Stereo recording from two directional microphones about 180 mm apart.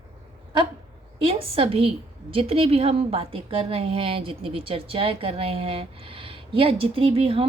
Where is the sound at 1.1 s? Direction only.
30° right (ahead or behind).